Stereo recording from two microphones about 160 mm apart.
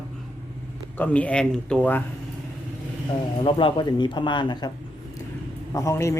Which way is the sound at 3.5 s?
30° left (ahead or behind).